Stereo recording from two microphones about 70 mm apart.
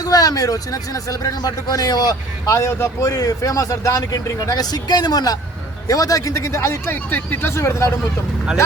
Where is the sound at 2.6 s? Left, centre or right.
Left.